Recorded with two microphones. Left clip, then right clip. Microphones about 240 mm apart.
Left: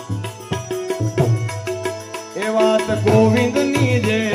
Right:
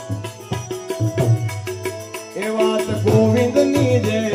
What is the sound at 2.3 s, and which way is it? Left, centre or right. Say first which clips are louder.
Music: left 3 dB; centre.